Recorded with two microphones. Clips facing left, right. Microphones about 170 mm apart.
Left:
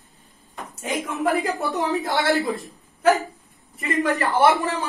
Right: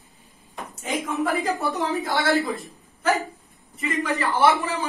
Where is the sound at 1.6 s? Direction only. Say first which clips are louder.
Left 1 dB; centre (ahead or behind).